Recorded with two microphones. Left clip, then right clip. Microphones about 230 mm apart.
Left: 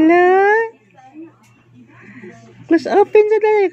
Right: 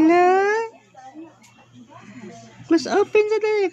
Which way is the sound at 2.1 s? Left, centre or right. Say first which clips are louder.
Left 4 dB; centre.